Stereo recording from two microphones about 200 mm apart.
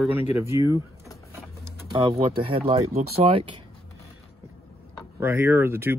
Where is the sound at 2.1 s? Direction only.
30° right (ahead or behind).